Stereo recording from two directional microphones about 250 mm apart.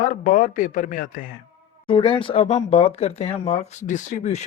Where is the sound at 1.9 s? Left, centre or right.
Left.